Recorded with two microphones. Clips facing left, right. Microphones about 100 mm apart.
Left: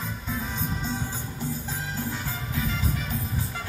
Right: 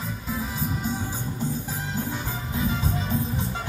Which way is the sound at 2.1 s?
20° right (ahead or behind).